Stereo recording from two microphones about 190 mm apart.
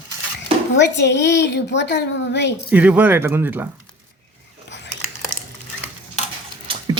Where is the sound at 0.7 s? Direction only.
65° left (ahead or behind).